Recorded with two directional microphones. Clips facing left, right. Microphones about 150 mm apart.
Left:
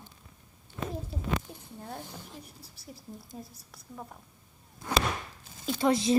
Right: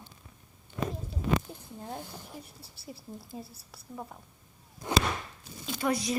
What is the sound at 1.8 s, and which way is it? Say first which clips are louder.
Speech: right 1 dB; 15° right (ahead or behind).